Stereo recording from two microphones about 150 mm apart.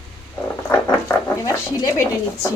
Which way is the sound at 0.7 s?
20° left (ahead or behind).